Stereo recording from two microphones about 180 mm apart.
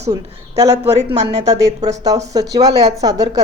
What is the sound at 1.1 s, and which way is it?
Speech, 40° right (ahead or behind).